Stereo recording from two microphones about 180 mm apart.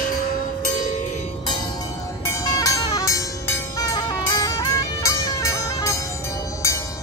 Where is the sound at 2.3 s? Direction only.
20° left (ahead or behind).